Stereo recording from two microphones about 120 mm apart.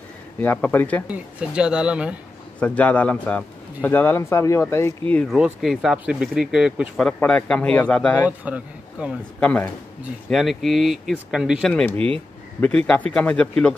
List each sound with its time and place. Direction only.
0.4 s speech: 15° left (ahead or behind)
1.0 s speech: 10° right (ahead or behind)
2.6 s speech: 10° left (ahead or behind)
5.3 s speech: 5° right (ahead or behind)
7.0 s speech: 10° left (ahead or behind)
8.3 s a man's voice: 10° right (ahead or behind)
9.4 s speech: 15° left (ahead or behind)
10.3 s speech: centre (ahead or behind)
11.7 s speech: 15° left (ahead or behind)